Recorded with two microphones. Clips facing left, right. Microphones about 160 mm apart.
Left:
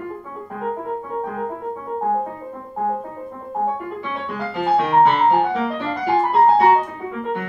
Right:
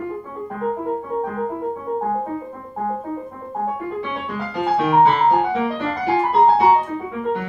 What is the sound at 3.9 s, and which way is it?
Music, centre (ahead or behind).